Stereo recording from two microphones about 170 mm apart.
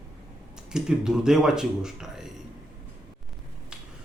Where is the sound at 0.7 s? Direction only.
5° right (ahead or behind).